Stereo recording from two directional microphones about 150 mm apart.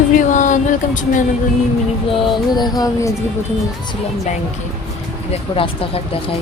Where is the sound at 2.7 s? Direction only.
25° left (ahead or behind).